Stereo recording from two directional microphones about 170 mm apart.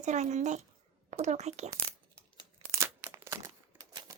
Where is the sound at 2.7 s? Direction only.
15° right (ahead or behind).